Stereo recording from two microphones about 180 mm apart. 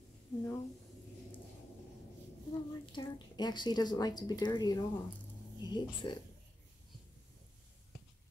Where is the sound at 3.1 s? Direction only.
25° left (ahead or behind).